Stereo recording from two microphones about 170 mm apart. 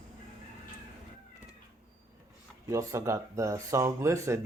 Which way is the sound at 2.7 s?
20° right (ahead or behind).